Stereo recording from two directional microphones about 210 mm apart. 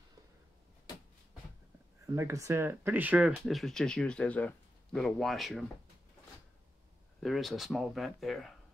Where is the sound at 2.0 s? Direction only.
15° right (ahead or behind).